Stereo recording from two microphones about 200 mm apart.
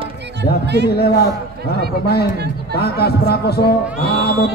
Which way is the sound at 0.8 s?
50° left (ahead or behind).